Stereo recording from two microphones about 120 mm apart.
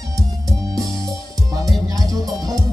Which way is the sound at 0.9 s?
30° right (ahead or behind).